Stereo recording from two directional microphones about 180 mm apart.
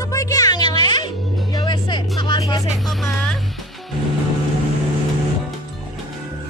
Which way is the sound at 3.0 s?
5° left (ahead or behind).